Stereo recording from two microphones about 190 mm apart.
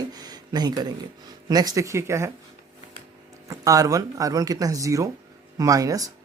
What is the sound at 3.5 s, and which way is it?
Speech, 20° right (ahead or behind).